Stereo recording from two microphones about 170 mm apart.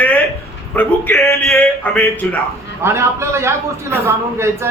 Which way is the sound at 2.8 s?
15° right (ahead or behind).